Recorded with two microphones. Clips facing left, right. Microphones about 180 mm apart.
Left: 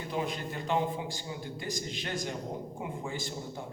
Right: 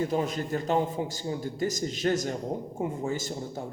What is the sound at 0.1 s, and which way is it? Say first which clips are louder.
A man's voice: right 6 dB; 40° right (ahead or behind).